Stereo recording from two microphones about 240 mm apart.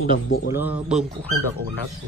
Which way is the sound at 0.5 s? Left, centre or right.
Centre.